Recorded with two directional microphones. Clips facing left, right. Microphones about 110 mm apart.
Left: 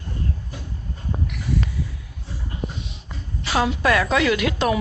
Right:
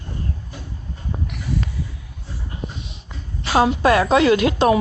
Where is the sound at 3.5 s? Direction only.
30° right (ahead or behind).